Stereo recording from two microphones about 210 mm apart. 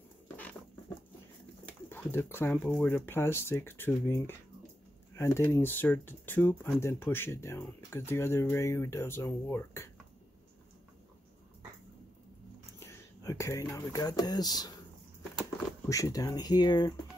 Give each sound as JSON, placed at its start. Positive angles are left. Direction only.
{"t": 1.7, "sound": "speech", "side_deg": 10}
{"t": 12.8, "sound": "speech", "side_deg": 15}
{"t": 15.9, "sound": "speech", "side_deg": 15}